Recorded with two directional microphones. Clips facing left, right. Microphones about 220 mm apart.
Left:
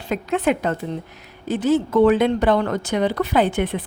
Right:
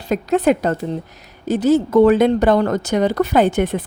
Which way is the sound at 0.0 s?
40° right (ahead or behind).